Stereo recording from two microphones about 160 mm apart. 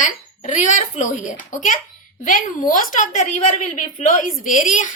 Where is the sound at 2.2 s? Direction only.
55° left (ahead or behind).